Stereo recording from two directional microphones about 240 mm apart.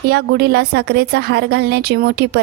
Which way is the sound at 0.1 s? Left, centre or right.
Right.